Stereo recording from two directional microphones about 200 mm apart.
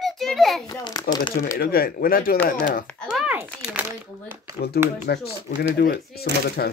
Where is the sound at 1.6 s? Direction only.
50° left (ahead or behind).